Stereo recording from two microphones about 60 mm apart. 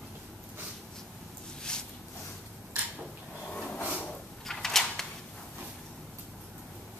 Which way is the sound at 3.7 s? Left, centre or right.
Left.